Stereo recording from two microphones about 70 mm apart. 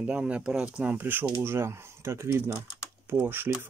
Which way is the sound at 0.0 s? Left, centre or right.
Centre.